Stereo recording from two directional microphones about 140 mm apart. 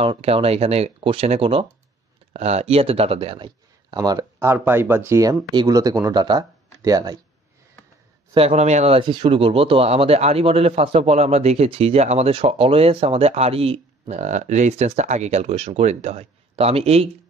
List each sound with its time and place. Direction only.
0.0 s a man's voice: 40° right (ahead or behind)
3.4 s a sound: 30° right (ahead or behind)
4.6 s speech: 15° right (ahead or behind)
8.4 s a man's voice: 50° right (ahead or behind)